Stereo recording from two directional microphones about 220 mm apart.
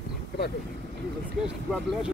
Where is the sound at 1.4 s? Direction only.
5° right (ahead or behind).